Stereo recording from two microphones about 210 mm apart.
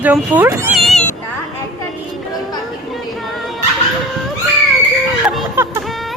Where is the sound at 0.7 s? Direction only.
Centre (ahead or behind).